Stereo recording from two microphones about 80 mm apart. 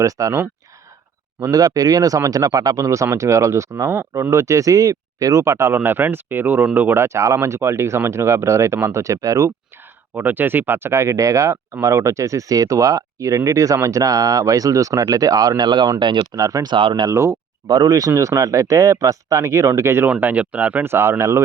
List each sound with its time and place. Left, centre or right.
0.0 s speech: right
10.2 s speech: right
16.0 s speech: right
16.3 s speech: right
16.6 s speech: right
17.1 s speech: right
17.7 s speech: right
20.1 s speech: centre
20.9 s speech: right